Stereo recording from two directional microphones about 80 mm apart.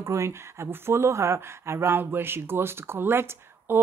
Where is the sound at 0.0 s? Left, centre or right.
Right.